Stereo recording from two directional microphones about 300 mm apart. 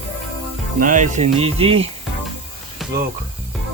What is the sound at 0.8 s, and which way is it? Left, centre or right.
Speech, right.